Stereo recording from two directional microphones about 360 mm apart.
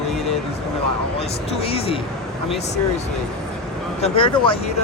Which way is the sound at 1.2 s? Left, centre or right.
Centre.